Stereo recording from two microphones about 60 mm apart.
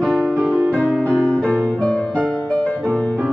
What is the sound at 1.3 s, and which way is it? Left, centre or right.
Music, left.